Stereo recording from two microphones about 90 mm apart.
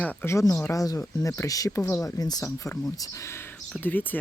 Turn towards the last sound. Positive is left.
turn(degrees=20)  # may be behind; listen again after turning